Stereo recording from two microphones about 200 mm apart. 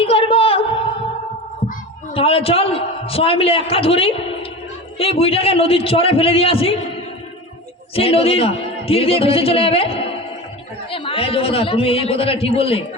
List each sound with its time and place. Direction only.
0.0 s a sound: 30° left (ahead or behind)
2.1 s a man's voice: 30° left (ahead or behind)
7.9 s a man's voice: 30° left (ahead or behind)